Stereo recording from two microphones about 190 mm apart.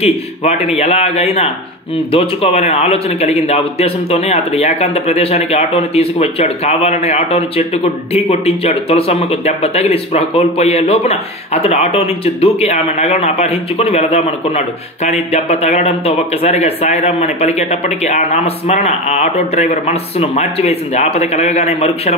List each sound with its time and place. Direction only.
0.0 s a man's voice: 35° left (ahead or behind)